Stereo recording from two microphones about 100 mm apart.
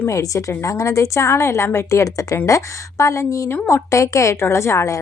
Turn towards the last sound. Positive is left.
turn(degrees=30)  # may be behind; listen again after turning